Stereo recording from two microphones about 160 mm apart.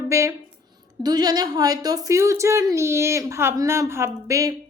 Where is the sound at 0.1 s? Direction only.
20° right (ahead or behind).